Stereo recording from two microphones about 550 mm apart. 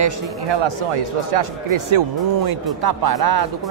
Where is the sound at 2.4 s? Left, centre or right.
Right.